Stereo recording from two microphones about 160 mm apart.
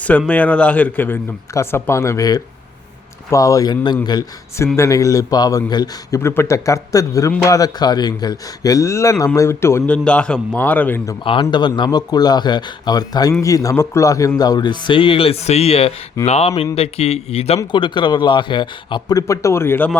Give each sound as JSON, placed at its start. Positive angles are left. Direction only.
{"t": 0.0, "sound": "a man's voice", "side_deg": 10}
{"t": 11.2, "sound": "a man's voice", "side_deg": 30}